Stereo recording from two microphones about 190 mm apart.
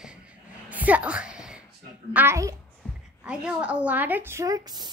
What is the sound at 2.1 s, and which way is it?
A child's voice, 10° right (ahead or behind).